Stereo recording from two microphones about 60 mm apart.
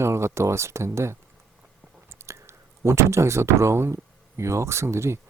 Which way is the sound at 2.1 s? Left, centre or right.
Right.